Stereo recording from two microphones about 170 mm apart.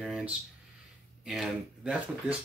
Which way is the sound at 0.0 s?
5° right (ahead or behind).